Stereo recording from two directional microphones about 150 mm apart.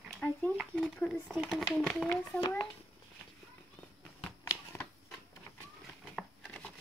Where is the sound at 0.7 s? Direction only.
10° left (ahead or behind).